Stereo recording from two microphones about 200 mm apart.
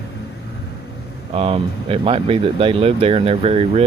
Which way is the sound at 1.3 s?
30° right (ahead or behind).